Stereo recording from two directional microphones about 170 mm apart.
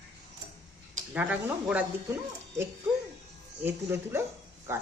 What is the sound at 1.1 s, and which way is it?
Speech, 10° right (ahead or behind).